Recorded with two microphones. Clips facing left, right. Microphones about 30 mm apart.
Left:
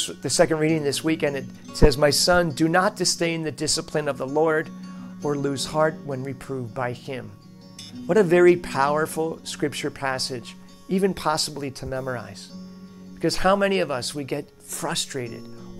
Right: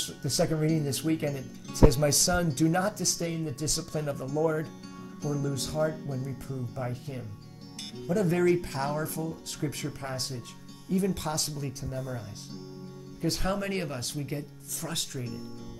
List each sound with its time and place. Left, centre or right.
0.2 s speech: left
0.7 s speech: left
4.3 s speech: left
5.3 s speech: left
6.1 s speech: centre
6.7 s speech: left
11.1 s speech: left
13.2 s speech: left